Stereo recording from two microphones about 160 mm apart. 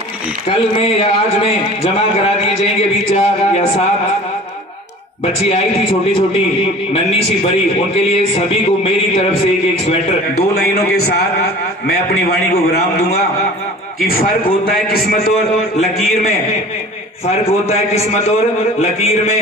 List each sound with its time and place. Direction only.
0.5 s a man's voice: 35° left (ahead or behind)
5.5 s a man's voice: 35° left (ahead or behind)
7.9 s a man's voice: 40° left (ahead or behind)
10.5 s a man's voice: 75° left (ahead or behind)
14.0 s a man's voice: 65° left (ahead or behind)
17.6 s a man's voice: 40° left (ahead or behind)